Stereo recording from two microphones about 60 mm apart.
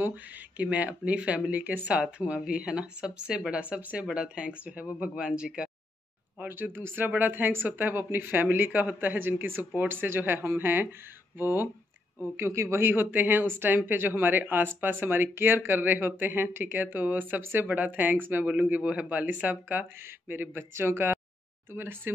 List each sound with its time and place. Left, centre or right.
0.0 s speech: right
2.0 s speech: centre
6.4 s speech: right
12.4 s speech: right